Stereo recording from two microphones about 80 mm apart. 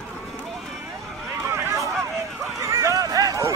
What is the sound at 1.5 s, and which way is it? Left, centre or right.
Run, right.